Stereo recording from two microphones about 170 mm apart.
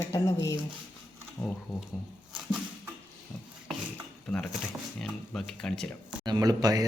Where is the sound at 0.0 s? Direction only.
20° left (ahead or behind).